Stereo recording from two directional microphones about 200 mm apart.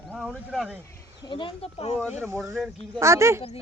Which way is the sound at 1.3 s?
25° left (ahead or behind).